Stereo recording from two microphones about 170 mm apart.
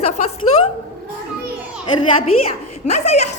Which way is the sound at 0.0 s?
40° left (ahead or behind).